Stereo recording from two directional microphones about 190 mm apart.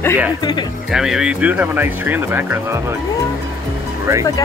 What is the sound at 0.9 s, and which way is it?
Speech, 5° right (ahead or behind).